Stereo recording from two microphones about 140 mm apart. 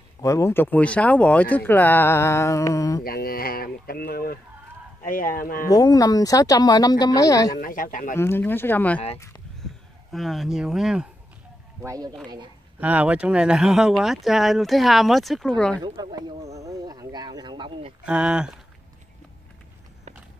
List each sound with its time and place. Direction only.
0.2 s speech: 20° left (ahead or behind)
3.0 s speech: 90° left
5.0 s speech: 80° left
5.7 s speech: 25° left (ahead or behind)
7.6 s speech: 80° left
8.2 s speech: 15° left (ahead or behind)
10.1 s speech: centre (ahead or behind)
11.8 s speech: 25° right (ahead or behind)
12.8 s speech: 10° right (ahead or behind); by 15.8 s 5° left (ahead or behind)
15.8 s speech: 30° right (ahead or behind)
16.5 s a sound: 25° right (ahead or behind)
18.0 s speech: 5° right (ahead or behind)